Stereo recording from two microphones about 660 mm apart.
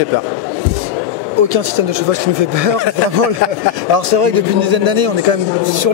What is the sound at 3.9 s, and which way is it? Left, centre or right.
Speech, right.